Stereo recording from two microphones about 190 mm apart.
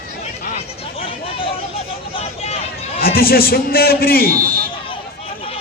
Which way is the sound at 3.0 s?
50° left (ahead or behind).